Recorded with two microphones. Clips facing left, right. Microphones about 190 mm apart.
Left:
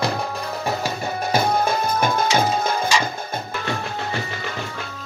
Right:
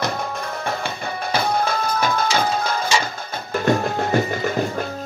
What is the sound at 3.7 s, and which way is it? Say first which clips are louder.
Music: right 10 dB; 45° right (ahead or behind).